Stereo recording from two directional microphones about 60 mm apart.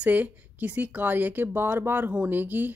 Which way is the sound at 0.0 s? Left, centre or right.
Right.